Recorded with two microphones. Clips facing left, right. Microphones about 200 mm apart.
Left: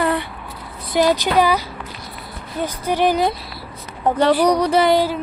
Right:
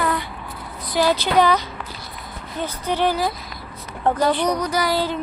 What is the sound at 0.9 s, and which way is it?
A woman's voice, 15° left (ahead or behind).